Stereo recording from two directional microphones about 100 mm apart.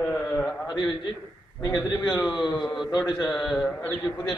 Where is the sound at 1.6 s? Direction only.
45° left (ahead or behind).